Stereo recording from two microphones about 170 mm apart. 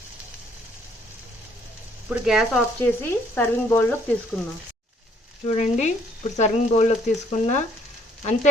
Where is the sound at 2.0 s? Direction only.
5° right (ahead or behind).